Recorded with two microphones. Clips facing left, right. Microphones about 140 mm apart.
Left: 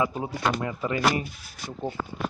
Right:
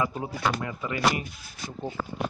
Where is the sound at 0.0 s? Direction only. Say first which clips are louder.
Left 2 dB; 20° left (ahead or behind).